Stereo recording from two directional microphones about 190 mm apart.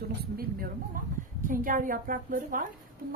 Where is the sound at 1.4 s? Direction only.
45° right (ahead or behind).